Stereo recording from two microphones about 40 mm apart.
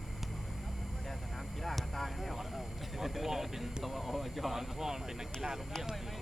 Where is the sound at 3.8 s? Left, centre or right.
Centre.